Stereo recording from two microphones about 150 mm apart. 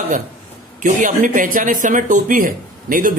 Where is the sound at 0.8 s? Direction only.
55° right (ahead or behind).